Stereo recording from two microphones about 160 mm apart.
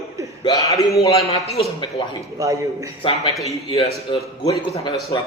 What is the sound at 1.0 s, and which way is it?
Speech, 35° left (ahead or behind).